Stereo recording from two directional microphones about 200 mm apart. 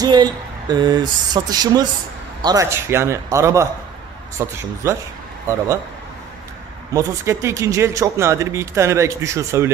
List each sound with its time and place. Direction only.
0.0 s a man's voice: 20° right (ahead or behind)
6.9 s a man's voice: 15° right (ahead or behind)